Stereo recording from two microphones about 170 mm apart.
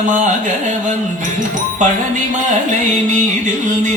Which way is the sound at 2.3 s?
45° right (ahead or behind).